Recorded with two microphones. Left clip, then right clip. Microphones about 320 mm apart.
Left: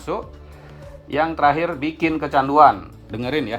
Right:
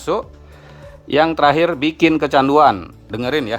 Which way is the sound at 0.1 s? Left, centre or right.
Right.